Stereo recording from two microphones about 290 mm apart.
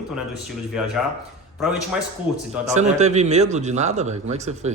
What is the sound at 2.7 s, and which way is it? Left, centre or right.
A man's voice, right.